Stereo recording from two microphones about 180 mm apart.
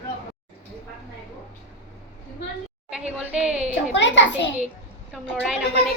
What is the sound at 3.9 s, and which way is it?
Speech, 90° left.